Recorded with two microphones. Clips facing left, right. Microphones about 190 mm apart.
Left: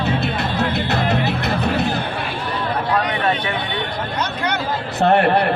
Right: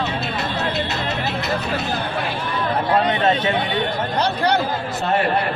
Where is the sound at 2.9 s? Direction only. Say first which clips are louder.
Right 3 dB; 25° right (ahead or behind).